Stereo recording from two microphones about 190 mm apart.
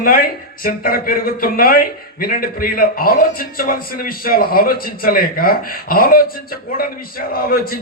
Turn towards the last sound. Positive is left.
turn(degrees=50)  # may be behind; listen again after turning